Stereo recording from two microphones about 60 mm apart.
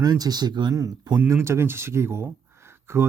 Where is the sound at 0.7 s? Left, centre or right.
Right.